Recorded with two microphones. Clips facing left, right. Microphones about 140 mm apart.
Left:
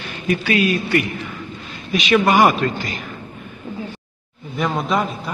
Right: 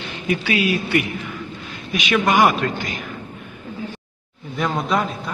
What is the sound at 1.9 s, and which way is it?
A man's voice, centre (ahead or behind).